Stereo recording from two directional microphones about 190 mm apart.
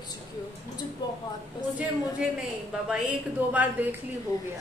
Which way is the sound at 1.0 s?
20° left (ahead or behind).